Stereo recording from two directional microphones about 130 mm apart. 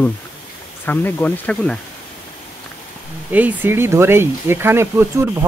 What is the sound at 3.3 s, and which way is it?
A man's voice, 15° right (ahead or behind).